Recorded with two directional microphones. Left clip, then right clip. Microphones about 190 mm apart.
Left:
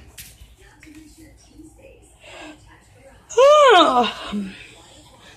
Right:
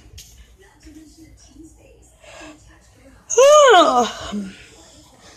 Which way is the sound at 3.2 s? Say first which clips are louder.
Right 1 dB; 10° right (ahead or behind).